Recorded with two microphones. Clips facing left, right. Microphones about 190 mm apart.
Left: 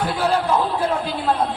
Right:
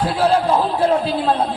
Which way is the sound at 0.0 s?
30° right (ahead or behind).